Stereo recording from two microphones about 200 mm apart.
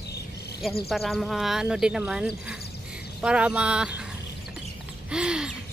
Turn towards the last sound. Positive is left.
turn(degrees=-5)  # may be behind; listen again after turning